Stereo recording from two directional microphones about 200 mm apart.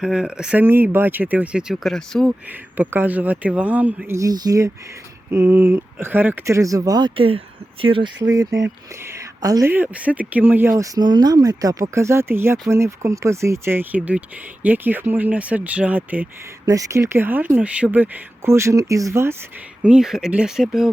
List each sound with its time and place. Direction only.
0.0 s speech: 5° right (ahead or behind)
2.5 s speech: 10° right (ahead or behind)